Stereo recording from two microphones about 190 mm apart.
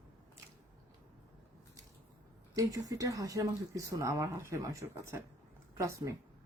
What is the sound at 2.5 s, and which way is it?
Speech, 15° right (ahead or behind).